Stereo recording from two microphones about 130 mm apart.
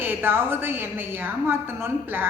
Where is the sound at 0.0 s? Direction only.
15° right (ahead or behind).